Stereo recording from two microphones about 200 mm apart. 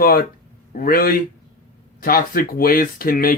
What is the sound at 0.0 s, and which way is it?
Speech, 45° left (ahead or behind).